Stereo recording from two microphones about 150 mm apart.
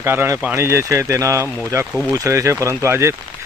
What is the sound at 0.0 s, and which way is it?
Speech, 15° right (ahead or behind).